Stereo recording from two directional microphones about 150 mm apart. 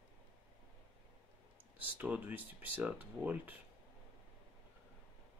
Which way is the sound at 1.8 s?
10° right (ahead or behind).